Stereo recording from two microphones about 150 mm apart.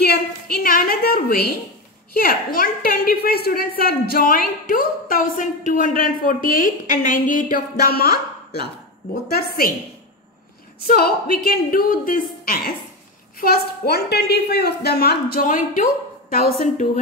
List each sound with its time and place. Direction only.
0.1 s a sound: 90° left
2.1 s a woman's voice: 75° left (ahead or behind); by 8.1 s 90° left
10.8 s a woman's voice: 90° left; by 12.7 s 70° left (ahead or behind)
13.4 s a woman's voice: 90° left; by 16.5 s 75° left (ahead or behind)